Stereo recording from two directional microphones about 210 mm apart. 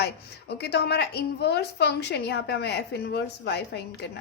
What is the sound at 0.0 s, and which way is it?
A woman's voice, 50° left (ahead or behind).